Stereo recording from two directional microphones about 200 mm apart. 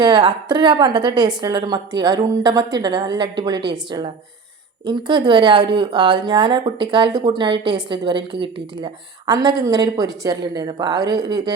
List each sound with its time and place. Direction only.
0.0 s speech: 20° right (ahead or behind)
4.9 s speech: 25° right (ahead or behind)